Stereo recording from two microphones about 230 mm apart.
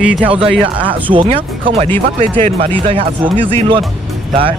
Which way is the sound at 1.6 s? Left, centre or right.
Right.